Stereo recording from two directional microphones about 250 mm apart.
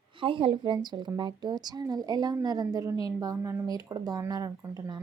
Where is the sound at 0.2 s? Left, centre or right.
Right.